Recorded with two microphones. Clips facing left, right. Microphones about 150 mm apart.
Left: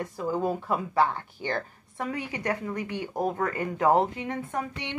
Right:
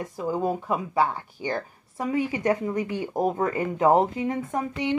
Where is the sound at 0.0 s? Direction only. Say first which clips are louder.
Right 1 dB; 15° right (ahead or behind).